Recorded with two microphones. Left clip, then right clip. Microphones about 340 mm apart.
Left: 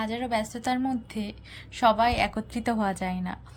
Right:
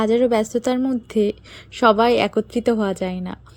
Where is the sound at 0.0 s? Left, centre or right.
Centre.